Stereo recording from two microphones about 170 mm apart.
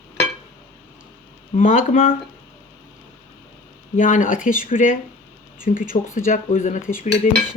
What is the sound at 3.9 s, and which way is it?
A woman's voice, 50° left (ahead or behind).